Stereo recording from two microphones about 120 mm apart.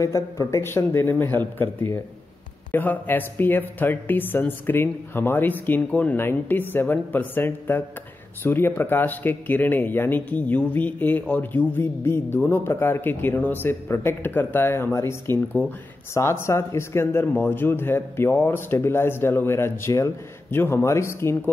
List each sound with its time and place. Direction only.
0.0 s speech: 25° left (ahead or behind)